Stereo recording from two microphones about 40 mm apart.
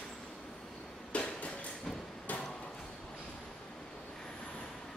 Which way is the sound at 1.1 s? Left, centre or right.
Left.